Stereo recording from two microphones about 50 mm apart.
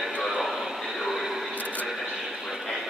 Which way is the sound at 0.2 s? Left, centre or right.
Centre.